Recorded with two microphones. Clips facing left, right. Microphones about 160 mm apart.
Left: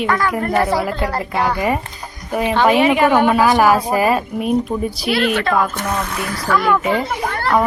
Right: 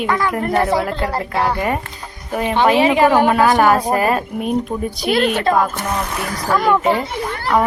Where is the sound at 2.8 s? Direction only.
30° right (ahead or behind).